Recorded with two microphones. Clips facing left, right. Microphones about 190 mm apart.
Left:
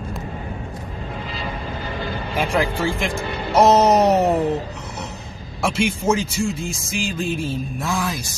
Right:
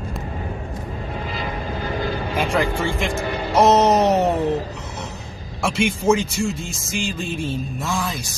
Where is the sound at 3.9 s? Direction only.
30° left (ahead or behind).